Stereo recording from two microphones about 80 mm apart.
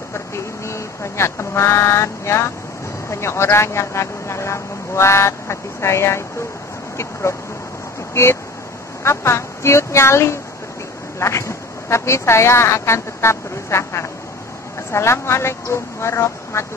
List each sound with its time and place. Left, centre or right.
0.7 s speech: left